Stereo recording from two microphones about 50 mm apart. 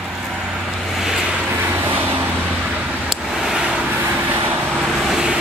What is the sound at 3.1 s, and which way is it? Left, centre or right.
Vehicle, centre.